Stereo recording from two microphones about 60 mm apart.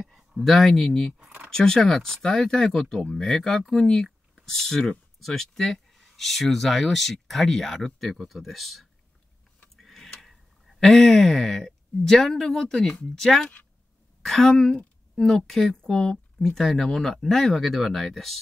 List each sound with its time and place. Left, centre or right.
0.0 s speech: centre
1.2 s a sound: right
1.5 s speech: centre
9.8 s tick-tock: centre
10.8 s speech: centre